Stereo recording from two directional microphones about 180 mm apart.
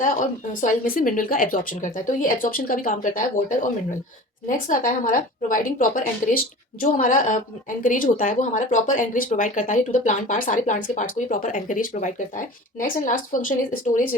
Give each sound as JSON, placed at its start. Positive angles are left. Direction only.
{"t": 0.0, "sound": "speech", "side_deg": 45}